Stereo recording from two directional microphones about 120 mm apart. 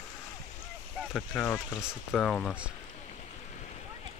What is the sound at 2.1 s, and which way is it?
Speech, 5° left (ahead or behind).